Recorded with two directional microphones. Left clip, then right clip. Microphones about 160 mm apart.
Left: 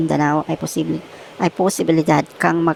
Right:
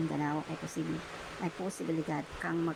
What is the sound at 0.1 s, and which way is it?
Speech, 50° left (ahead or behind).